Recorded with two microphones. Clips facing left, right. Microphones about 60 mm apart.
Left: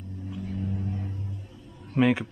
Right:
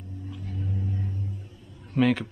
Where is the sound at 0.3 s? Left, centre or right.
Centre.